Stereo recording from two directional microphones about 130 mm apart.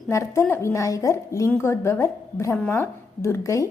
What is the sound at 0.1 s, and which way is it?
A woman's voice, 20° left (ahead or behind).